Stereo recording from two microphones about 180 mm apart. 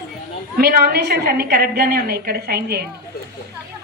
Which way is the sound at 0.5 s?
55° right (ahead or behind).